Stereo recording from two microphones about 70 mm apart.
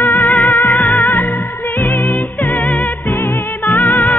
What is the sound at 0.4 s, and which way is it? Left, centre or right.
Music, left.